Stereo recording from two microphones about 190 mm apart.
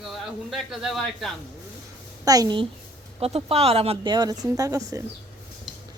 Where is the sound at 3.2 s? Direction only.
30° right (ahead or behind); by 5.0 s 15° right (ahead or behind).